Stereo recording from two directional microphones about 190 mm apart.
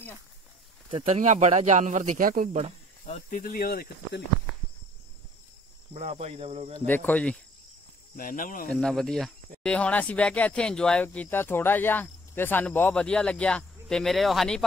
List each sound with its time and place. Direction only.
0.8 s speech: 35° right (ahead or behind)
3.1 s speech: 45° left (ahead or behind)
5.9 s speech: 35° right (ahead or behind)
6.9 s speech: 10° left (ahead or behind)
8.2 s speech: 45° left (ahead or behind)
8.6 s speech: 5° left (ahead or behind)